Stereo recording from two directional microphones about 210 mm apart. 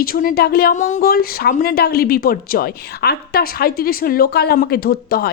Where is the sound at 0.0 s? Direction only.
40° left (ahead or behind).